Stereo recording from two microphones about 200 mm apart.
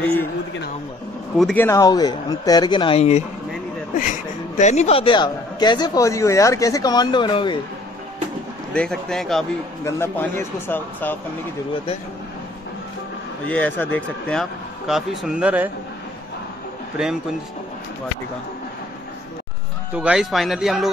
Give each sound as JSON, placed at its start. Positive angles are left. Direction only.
{"t": 0.0, "sound": "speech", "side_deg": 10}
{"t": 1.4, "sound": "speech", "side_deg": 10}
{"t": 4.6, "sound": "speech", "side_deg": 35}
{"t": 8.7, "sound": "a man's voice", "side_deg": 5}
{"t": 9.8, "sound": "speech", "side_deg": 10}
{"t": 13.5, "sound": "a man's voice", "side_deg": 10}
{"t": 19.9, "sound": "a man's voice", "side_deg": -5}